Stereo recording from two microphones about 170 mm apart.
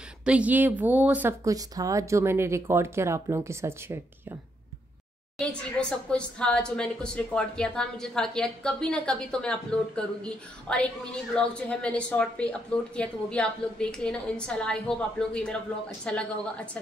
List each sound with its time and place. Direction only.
0.2 s speech: 5° right (ahead or behind)
5.4 s a woman's voice: 5° left (ahead or behind)